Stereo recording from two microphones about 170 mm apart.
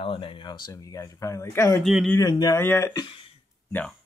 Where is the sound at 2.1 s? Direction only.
20° left (ahead or behind).